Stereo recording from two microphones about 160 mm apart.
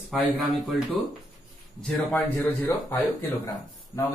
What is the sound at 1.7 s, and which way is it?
A man's voice, 5° left (ahead or behind).